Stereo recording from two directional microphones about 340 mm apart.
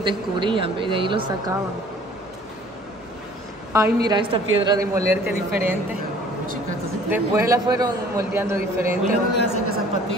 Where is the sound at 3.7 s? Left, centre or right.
Centre.